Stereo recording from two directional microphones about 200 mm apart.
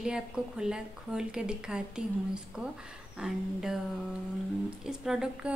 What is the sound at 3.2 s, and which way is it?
Speech, 5° right (ahead or behind).